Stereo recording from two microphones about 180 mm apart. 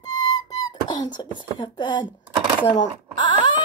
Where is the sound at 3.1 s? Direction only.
25° left (ahead or behind).